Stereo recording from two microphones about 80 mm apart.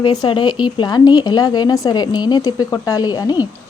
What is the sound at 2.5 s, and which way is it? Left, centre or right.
Speech, left.